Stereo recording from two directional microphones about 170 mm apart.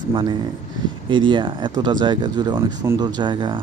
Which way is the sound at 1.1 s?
30° right (ahead or behind).